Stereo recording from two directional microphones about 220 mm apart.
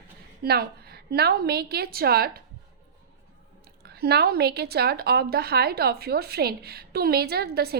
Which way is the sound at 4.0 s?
45° right (ahead or behind).